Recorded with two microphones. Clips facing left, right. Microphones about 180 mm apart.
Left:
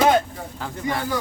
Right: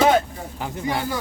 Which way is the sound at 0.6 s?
20° right (ahead or behind).